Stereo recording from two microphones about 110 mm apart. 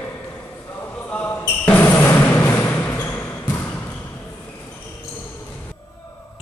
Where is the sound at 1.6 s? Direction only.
15° left (ahead or behind).